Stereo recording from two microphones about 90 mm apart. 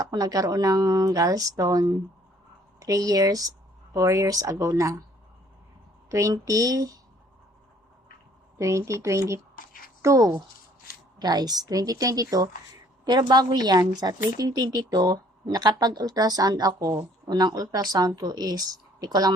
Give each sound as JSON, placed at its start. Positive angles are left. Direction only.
{"t": 0.0, "sound": "a woman's voice", "side_deg": -45}
{"t": 6.1, "sound": "speech", "side_deg": -40}
{"t": 8.5, "sound": "speech", "side_deg": -35}
{"t": 11.2, "sound": "a woman's voice", "side_deg": -50}